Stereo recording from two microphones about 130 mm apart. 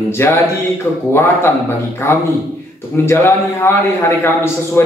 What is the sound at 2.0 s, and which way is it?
A man's voice, 20° left (ahead or behind).